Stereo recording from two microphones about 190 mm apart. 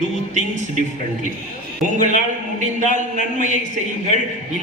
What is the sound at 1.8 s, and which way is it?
A man's voice, 40° right (ahead or behind).